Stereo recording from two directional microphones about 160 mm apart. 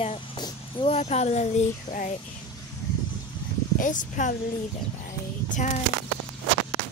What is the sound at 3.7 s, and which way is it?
Speech, 55° left (ahead or behind).